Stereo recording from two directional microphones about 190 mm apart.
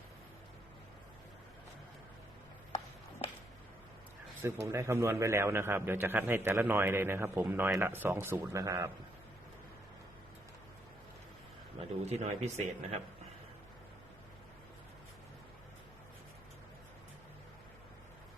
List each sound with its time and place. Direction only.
3.2 s a sound: 30° left (ahead or behind)
4.4 s a man's voice: 15° right (ahead or behind)
12.0 s speech: 35° right (ahead or behind)